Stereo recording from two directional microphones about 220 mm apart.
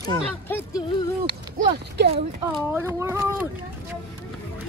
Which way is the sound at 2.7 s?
10° right (ahead or behind).